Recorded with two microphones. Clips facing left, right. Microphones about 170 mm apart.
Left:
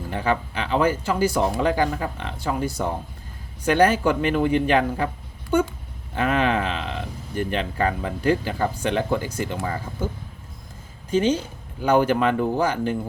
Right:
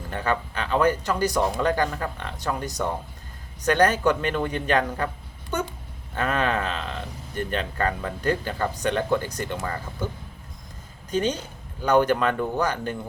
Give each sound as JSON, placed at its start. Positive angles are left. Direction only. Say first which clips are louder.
{"t": 0.1, "sound": "speech", "louder": "left 2 dB", "side_deg": 10}
{"t": 11.1, "sound": "speech", "louder": "left 4 dB", "side_deg": 10}